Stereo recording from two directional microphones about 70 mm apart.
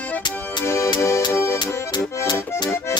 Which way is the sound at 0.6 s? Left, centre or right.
Left.